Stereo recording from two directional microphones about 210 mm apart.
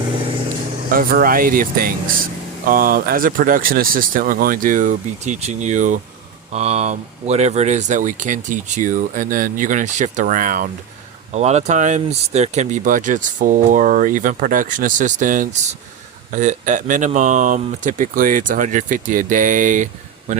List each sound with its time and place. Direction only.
0.9 s speech: 45° right (ahead or behind)